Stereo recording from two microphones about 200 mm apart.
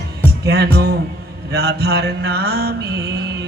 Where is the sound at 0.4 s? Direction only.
55° right (ahead or behind).